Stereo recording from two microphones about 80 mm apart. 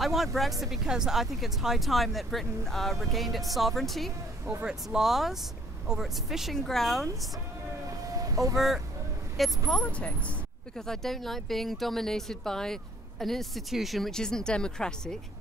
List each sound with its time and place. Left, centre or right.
0.0 s speech: centre
8.1 s vehicle: right
8.5 s speech: centre
9.7 s speech: centre
10.9 s speech: centre